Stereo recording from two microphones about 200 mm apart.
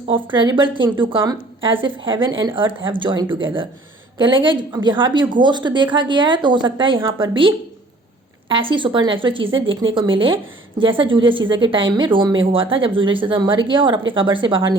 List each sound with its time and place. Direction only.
0.4 s a woman's voice: 25° right (ahead or behind)